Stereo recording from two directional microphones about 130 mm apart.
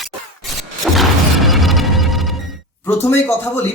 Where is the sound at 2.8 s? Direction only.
15° left (ahead or behind).